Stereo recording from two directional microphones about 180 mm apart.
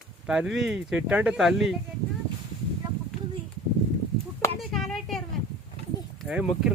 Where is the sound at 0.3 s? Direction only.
5° right (ahead or behind).